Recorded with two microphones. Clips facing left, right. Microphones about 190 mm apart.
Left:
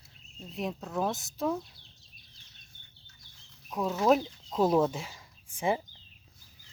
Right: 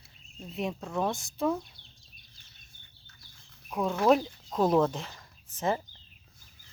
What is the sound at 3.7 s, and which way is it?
Speech, centre (ahead or behind).